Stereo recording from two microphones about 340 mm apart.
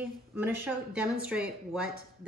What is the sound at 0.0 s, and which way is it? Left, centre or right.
A woman's voice, centre.